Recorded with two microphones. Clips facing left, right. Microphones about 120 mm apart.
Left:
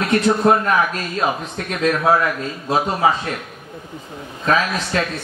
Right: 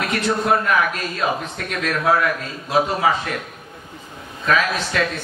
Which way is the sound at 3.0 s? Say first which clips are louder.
Left 5 dB; 30° left (ahead or behind).